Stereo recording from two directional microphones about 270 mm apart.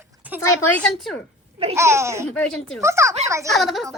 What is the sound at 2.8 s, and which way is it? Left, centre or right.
Speech, centre.